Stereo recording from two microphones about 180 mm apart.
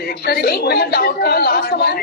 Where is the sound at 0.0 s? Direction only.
60° left (ahead or behind).